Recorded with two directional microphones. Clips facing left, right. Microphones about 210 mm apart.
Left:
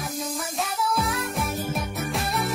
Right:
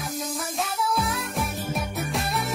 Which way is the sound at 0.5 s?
Centre (ahead or behind).